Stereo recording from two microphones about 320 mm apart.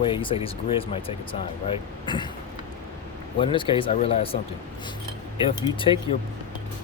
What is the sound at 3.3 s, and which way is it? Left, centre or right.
Speech, centre.